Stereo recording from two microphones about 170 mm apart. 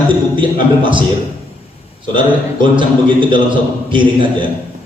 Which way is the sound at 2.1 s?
30° right (ahead or behind).